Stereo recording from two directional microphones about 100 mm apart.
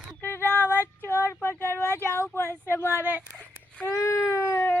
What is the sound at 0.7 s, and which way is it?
Female singing, 30° left (ahead or behind).